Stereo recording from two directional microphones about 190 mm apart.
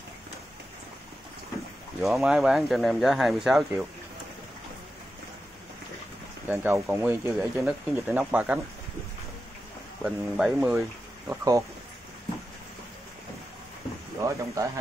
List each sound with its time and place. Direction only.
2.0 s speech: centre (ahead or behind)
6.4 s speech: 10° right (ahead or behind)
10.0 s speech: 5° right (ahead or behind)
11.2 s speech: 15° right (ahead or behind)
14.2 s speech: 15° right (ahead or behind)